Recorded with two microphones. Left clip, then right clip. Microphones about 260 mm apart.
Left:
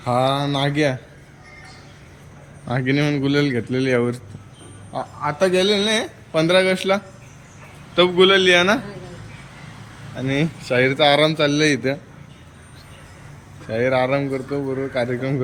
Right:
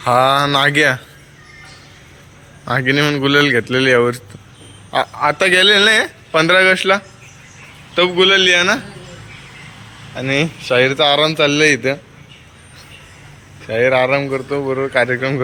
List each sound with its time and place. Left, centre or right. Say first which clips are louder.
0.0 s a man's voice: right 7 dB; centre
2.6 s a man's voice: right 6 dB; centre
4.9 s a man's voice: right 9 dB; right
5.5 s a man's voice: right 8 dB; centre
10.2 s a man's voice: right 6 dB; centre
13.7 s a man's voice: right 5 dB; centre